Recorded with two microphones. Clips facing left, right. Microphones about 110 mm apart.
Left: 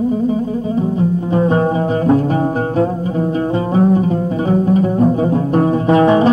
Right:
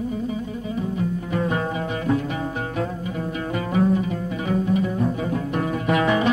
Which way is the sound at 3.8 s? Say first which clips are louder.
Left 7 dB; 35° left (ahead or behind).